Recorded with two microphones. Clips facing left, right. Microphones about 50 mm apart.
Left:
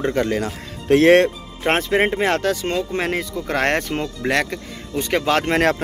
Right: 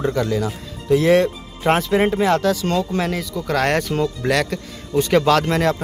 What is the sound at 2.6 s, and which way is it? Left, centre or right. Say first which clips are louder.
Speech: right 1 dB; left.